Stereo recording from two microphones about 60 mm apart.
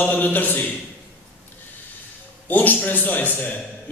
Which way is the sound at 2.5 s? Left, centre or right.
Left.